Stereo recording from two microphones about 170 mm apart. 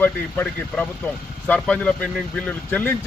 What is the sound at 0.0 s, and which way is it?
Speech, 10° left (ahead or behind).